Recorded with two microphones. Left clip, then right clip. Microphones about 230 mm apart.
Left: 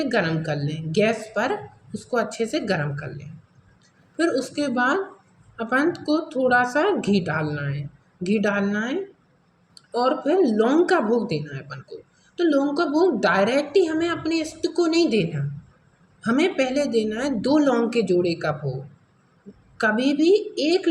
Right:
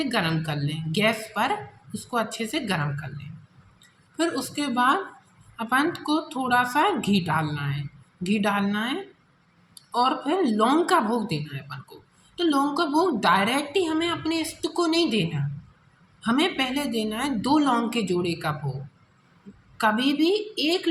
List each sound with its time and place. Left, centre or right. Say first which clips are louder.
0.0 s speech: left 3 dB; right
4.2 s speech: left 4 dB; right
19.7 s speech: left 1 dB; right